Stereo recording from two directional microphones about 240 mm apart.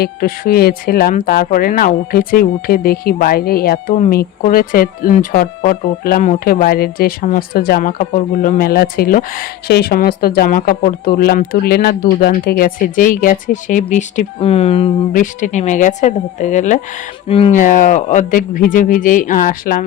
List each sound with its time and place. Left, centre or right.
0.0 s speech: left
3.9 s speech: left